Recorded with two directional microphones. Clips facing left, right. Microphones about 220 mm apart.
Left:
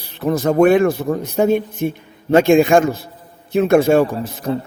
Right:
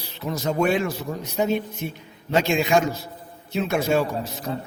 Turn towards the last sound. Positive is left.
turn(degrees=50)  # may be behind; listen again after turning